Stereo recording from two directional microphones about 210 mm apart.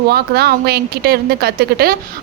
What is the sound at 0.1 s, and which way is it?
Speech, 50° right (ahead or behind).